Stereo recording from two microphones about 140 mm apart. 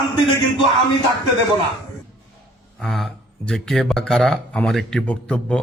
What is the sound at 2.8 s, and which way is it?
Speech, 5° left (ahead or behind).